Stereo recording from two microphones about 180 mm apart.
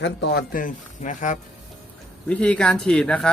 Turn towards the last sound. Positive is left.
turn(degrees=5)  # may be behind; listen again after turning